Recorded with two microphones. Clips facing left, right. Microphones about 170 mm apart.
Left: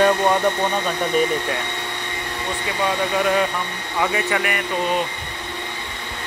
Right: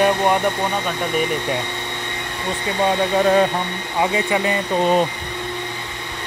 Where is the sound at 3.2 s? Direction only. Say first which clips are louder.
Right 5 dB; 30° right (ahead or behind).